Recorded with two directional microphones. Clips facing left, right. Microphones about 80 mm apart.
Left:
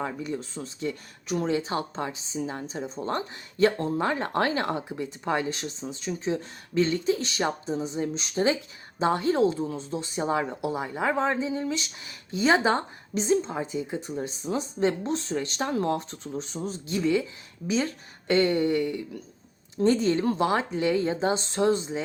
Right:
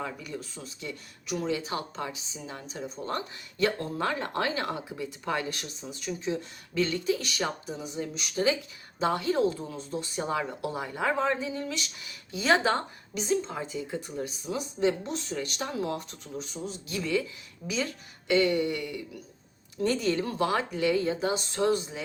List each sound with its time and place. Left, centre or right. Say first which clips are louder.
0.0 s speech: left 5 dB; left
16.9 s speech: left 5 dB; left
18.3 s speech: left 2 dB; left